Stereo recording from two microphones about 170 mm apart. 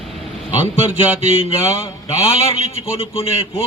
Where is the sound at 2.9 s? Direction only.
35° left (ahead or behind).